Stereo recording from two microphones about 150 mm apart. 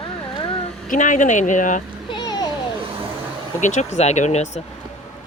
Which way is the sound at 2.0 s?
30° left (ahead or behind).